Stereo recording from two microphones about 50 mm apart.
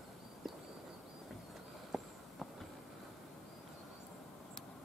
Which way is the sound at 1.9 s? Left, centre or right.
Centre.